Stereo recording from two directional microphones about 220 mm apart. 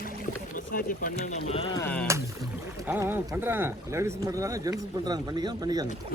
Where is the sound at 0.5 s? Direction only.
40° left (ahead or behind).